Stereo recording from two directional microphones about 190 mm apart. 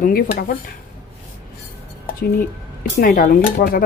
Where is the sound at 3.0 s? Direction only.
45° left (ahead or behind).